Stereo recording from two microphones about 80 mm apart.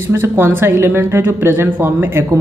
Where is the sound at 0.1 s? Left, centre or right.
Right.